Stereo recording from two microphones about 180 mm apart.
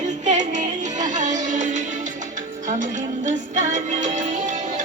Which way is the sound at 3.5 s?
45° right (ahead or behind).